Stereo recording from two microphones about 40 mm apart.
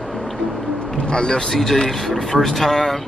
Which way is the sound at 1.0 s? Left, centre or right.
Centre.